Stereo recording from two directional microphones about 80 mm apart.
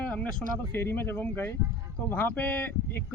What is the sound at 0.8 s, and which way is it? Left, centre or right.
Speech, left.